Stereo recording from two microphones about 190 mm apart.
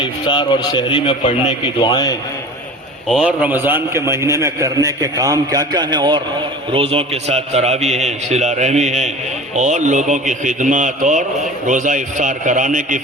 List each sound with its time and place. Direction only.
0.0 s a man's voice: 25° left (ahead or behind)
3.1 s a man's voice: 5° right (ahead or behind); by 13.0 s 40° right (ahead or behind)